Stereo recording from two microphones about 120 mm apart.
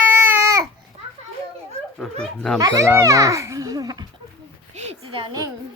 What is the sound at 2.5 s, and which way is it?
Speech, 30° right (ahead or behind).